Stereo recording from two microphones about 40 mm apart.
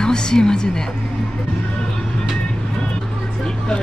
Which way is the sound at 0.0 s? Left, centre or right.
Centre.